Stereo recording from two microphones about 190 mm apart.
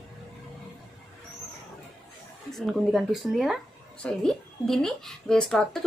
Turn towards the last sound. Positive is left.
turn(degrees=0)  # may be behind; listen again after turning